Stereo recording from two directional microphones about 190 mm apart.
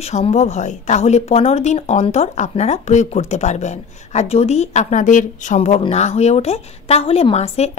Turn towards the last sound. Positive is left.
turn(degrees=35)  # may be behind; listen again after turning